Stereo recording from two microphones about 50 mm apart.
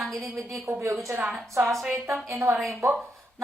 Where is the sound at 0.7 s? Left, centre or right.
Right.